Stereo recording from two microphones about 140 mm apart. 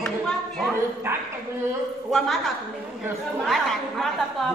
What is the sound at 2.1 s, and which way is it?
A woman's voice, centre (ahead or behind).